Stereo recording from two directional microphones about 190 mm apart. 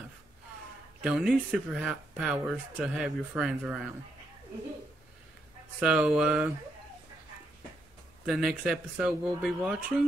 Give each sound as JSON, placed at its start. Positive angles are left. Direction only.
{"t": 1.0, "sound": "speech", "side_deg": -5}
{"t": 5.8, "sound": "speech", "side_deg": -5}
{"t": 8.3, "sound": "speech", "side_deg": -5}